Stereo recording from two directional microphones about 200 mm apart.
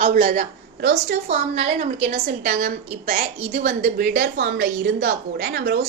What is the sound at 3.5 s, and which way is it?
A woman's voice, 55° right (ahead or behind).